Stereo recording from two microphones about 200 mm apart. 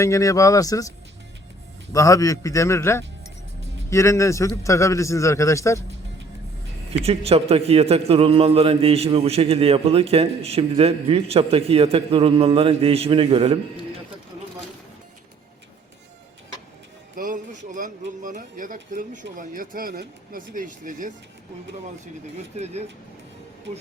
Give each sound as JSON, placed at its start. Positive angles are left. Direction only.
{"t": 0.0, "sound": "a man's voice", "side_deg": 15}
{"t": 7.3, "sound": "a man's voice", "side_deg": -30}
{"t": 17.2, "sound": "music", "side_deg": -40}
{"t": 17.7, "sound": "a man's voice", "side_deg": -40}
{"t": 22.5, "sound": "a man's voice", "side_deg": -35}